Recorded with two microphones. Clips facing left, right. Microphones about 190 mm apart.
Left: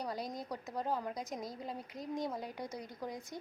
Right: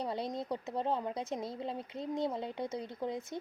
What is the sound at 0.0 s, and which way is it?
Speech, 25° right (ahead or behind).